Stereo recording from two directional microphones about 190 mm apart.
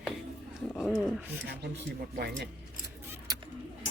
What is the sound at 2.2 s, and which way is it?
Speech, 60° right (ahead or behind).